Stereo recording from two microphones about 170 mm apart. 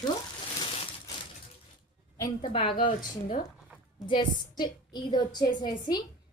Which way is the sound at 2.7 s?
55° left (ahead or behind).